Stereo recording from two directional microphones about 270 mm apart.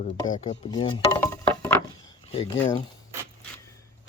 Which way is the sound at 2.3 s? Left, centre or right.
Left.